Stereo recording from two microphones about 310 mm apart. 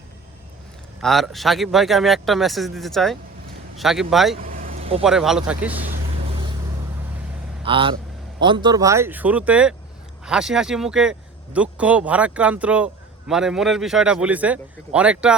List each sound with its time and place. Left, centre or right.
1.0 s a man's voice: centre
4.4 s vehicle: right
5.0 s a man's voice: centre
5.9 s vehicle: centre
7.6 s a man's voice: centre